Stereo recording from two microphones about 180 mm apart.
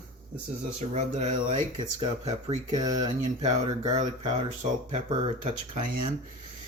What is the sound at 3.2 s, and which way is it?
Speech, 40° right (ahead or behind).